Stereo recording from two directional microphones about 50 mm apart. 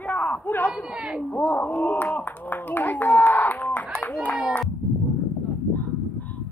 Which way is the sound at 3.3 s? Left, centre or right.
Left.